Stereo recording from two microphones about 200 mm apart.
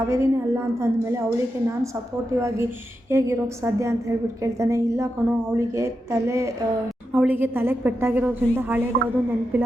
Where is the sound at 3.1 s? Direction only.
15° right (ahead or behind).